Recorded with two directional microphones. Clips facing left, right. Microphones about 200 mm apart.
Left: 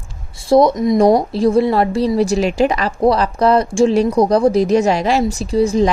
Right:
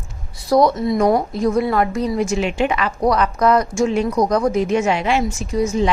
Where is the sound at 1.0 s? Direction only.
35° left (ahead or behind).